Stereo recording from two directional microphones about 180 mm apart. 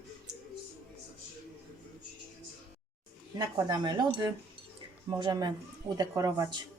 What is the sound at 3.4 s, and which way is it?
A woman's voice, 20° right (ahead or behind).